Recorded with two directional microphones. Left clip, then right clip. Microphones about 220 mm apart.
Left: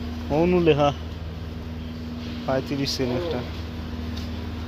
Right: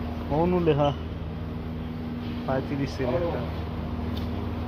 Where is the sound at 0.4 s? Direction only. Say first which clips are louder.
Left 4 dB; 50° left (ahead or behind).